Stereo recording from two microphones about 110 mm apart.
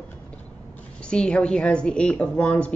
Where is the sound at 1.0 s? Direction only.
10° left (ahead or behind).